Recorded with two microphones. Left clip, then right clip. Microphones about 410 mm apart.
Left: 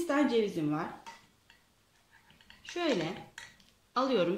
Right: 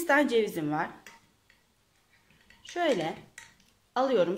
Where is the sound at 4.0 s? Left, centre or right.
Centre.